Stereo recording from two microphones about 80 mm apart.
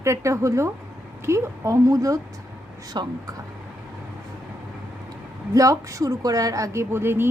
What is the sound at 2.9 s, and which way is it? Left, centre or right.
Speech, right.